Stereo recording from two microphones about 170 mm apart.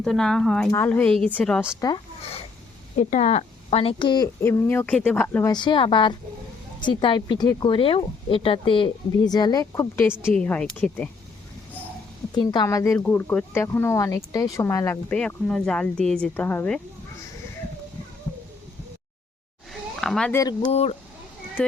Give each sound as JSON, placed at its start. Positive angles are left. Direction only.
{"t": 0.0, "sound": "speech", "side_deg": 5}
{"t": 3.0, "sound": "speech", "side_deg": 45}
{"t": 4.4, "sound": "speech", "side_deg": 15}
{"t": 5.5, "sound": "speech", "side_deg": 25}
{"t": 10.1, "sound": "speech", "side_deg": -5}
{"t": 10.3, "sound": "speech", "side_deg": 5}
{"t": 12.3, "sound": "speech", "side_deg": 25}
{"t": 20.0, "sound": "speech", "side_deg": 5}
{"t": 20.3, "sound": "speech", "side_deg": 20}
{"t": 20.7, "sound": "speech", "side_deg": 35}
{"t": 21.6, "sound": "speech", "side_deg": 5}